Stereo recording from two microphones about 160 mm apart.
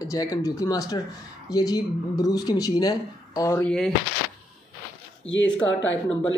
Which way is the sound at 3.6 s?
5° left (ahead or behind).